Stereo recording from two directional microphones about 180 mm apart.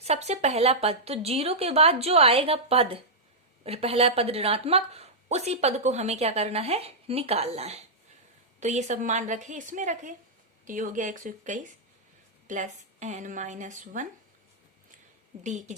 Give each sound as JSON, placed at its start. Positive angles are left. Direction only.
{"t": 0.0, "sound": "a woman's voice", "side_deg": -35}
{"t": 15.4, "sound": "speech", "side_deg": -40}